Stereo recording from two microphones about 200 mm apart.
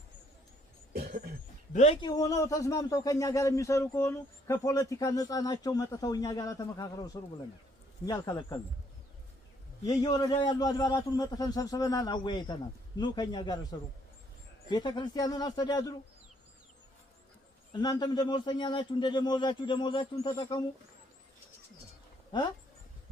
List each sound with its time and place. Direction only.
0.9 s cough: 50° right (ahead or behind)
1.7 s a man's voice: 35° left (ahead or behind)
2.0 s a man's voice: 20° left (ahead or behind)
9.8 s a man's voice: 20° left (ahead or behind)
17.7 s a man's voice: 20° left (ahead or behind)